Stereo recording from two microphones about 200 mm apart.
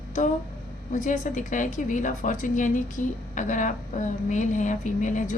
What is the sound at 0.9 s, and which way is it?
A woman's voice, 40° left (ahead or behind).